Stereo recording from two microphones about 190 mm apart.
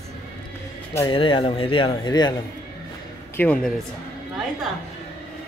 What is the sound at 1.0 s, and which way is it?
Speech, 25° left (ahead or behind).